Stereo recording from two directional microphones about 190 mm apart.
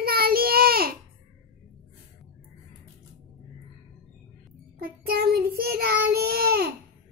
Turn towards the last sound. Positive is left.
turn(degrees=-55)  # may be behind; listen again after turning